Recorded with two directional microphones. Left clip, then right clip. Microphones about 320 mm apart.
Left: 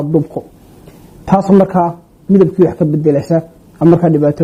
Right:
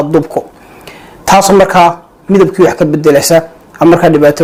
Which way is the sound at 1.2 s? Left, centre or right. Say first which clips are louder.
Right 6 dB; centre.